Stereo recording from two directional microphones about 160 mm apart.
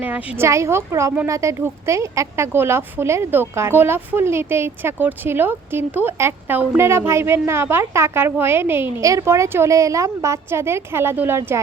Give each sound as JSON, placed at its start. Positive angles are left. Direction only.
{"t": 0.0, "sound": "speech", "side_deg": -10}